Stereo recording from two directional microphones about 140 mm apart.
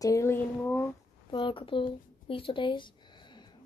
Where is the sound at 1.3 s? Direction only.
35° left (ahead or behind).